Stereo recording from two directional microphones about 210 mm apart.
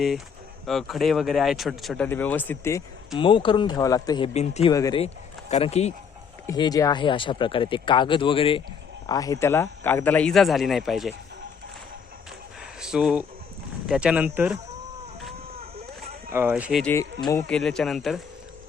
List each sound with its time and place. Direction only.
0.6 s speech: centre (ahead or behind)
3.2 s speech: 25° left (ahead or behind)
4.4 s speech: 30° left (ahead or behind)
4.7 s speech: 20° left (ahead or behind)
5.0 s speech: 30° left (ahead or behind)
6.5 s speech: 15° left (ahead or behind); by 11.1 s centre (ahead or behind)
12.8 s speech: 5° right (ahead or behind)
16.3 s speech: 10° right (ahead or behind)
16.8 s speech: 10° left (ahead or behind)